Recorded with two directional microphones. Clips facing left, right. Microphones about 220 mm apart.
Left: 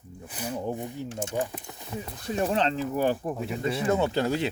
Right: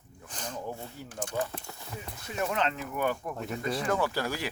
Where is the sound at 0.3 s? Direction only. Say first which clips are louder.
Left 6 dB; 10° left (ahead or behind).